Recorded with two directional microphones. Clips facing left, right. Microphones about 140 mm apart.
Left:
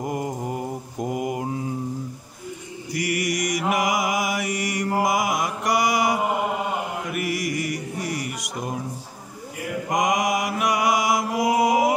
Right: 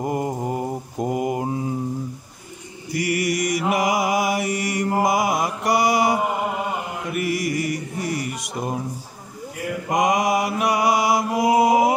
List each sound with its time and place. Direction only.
0.0 s mantra: 30° right (ahead or behind)
2.9 s mantra: 30° right (ahead or behind)
9.9 s mantra: 30° right (ahead or behind)